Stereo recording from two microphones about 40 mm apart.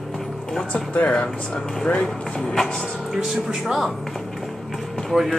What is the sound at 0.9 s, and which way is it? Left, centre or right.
Speech, left.